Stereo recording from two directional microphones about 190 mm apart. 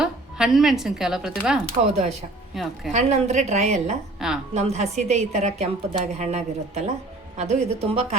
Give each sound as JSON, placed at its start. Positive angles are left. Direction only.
{"t": 0.0, "sound": "a woman's voice", "side_deg": 0}
{"t": 2.9, "sound": "a woman's voice", "side_deg": -40}
{"t": 4.2, "sound": "a woman's voice", "side_deg": 0}
{"t": 4.5, "sound": "a woman's voice", "side_deg": -35}